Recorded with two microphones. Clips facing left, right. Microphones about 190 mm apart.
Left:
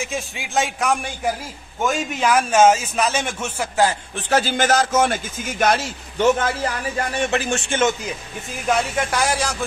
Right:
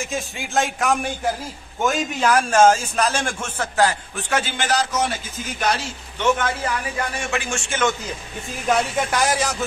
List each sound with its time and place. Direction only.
0.0 s a man's voice: centre (ahead or behind)
4.3 s a man's voice: 35° left (ahead or behind)
7.2 s speech: 35° left (ahead or behind)
8.6 s a man's voice: centre (ahead or behind)